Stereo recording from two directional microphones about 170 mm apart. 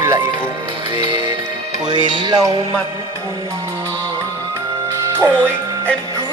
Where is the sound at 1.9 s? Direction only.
25° right (ahead or behind).